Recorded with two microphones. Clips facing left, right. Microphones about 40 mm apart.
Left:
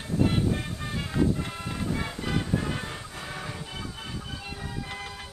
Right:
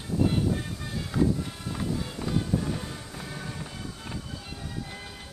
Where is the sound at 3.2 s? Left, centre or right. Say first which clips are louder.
Left 2 dB; left.